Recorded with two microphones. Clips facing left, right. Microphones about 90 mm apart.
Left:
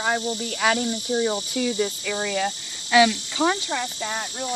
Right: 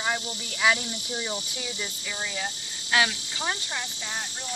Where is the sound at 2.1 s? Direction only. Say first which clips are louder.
Left 8 dB; 80° left.